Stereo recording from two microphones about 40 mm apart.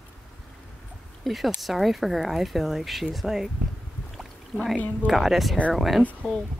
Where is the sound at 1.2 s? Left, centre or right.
Centre.